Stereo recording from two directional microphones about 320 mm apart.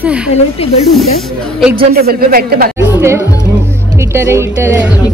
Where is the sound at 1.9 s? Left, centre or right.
Right.